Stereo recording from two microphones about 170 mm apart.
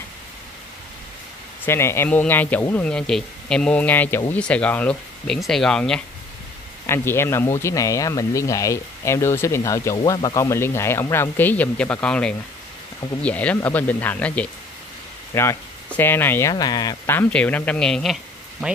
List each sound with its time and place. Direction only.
1.7 s speech: 15° left (ahead or behind)